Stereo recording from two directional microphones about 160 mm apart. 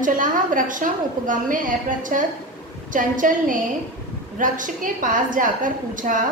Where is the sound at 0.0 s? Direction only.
55° right (ahead or behind).